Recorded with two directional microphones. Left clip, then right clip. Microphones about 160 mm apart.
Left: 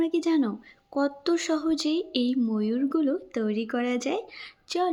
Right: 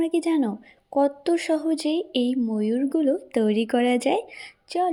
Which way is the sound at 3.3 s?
30° right (ahead or behind).